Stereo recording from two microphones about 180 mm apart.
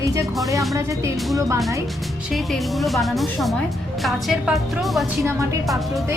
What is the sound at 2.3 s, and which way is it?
Speech, centre (ahead or behind).